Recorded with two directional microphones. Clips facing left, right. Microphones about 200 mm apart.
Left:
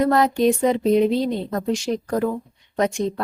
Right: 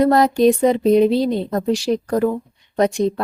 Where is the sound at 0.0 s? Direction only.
35° right (ahead or behind).